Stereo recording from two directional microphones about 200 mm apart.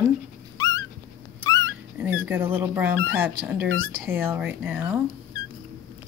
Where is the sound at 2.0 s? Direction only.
10° right (ahead or behind).